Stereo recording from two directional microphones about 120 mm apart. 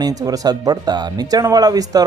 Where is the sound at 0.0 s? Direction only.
30° right (ahead or behind).